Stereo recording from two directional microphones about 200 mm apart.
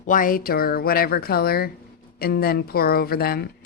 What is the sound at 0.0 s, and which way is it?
A woman's voice, 40° left (ahead or behind).